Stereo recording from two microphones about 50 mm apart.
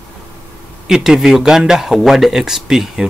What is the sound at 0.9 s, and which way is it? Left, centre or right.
Speech, centre.